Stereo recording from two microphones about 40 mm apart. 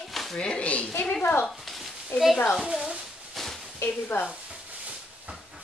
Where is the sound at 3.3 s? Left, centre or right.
Centre.